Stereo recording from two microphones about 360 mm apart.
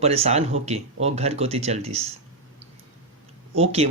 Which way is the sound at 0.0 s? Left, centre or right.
Centre.